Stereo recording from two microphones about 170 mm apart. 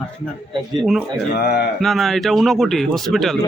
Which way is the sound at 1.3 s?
65° left (ahead or behind).